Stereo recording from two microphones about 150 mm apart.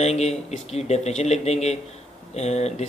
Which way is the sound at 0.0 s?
45° left (ahead or behind).